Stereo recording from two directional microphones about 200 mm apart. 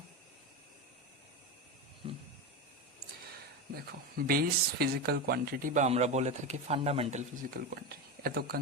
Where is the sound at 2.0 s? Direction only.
25° right (ahead or behind).